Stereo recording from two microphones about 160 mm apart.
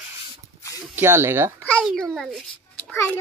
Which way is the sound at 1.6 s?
10° left (ahead or behind).